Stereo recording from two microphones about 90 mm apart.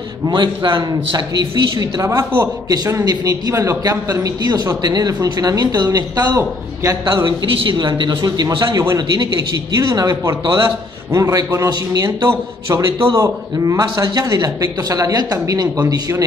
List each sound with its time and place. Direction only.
0.3 s a man's voice: 60° right (ahead or behind)
2.0 s a man's voice: 35° right (ahead or behind)
2.7 s a man's voice: 45° right (ahead or behind)
7.2 s a man's voice: 65° right (ahead or behind); by 16.3 s 40° right (ahead or behind)